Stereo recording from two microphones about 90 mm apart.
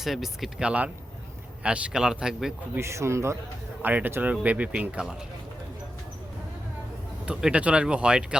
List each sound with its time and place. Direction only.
0.0 s speech: centre (ahead or behind)
2.7 s speech: 30° right (ahead or behind)
3.8 s speech: 20° right (ahead or behind)
7.3 s speech: 15° right (ahead or behind)